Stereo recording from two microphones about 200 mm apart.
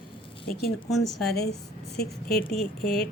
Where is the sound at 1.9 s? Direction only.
50° left (ahead or behind).